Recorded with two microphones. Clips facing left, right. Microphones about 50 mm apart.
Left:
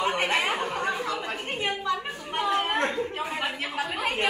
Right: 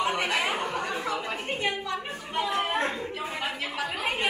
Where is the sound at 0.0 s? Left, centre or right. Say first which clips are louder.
Left 1 dB; left.